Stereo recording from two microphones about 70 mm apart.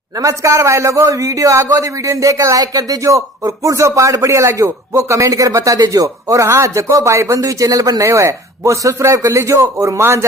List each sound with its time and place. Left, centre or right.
0.2 s speech: right
8.0 s speech: right